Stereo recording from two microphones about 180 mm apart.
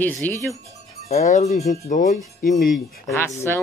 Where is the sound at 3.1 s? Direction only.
15° left (ahead or behind).